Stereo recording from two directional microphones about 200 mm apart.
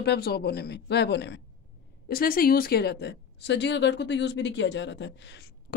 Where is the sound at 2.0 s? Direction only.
45° left (ahead or behind).